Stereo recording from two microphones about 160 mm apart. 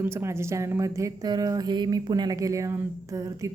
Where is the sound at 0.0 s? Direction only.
15° right (ahead or behind).